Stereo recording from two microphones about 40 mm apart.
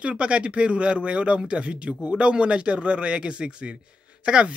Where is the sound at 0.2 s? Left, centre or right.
Right.